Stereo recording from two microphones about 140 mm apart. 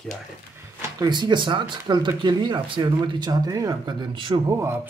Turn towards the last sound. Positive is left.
turn(degrees=-20)  # may be behind; listen again after turning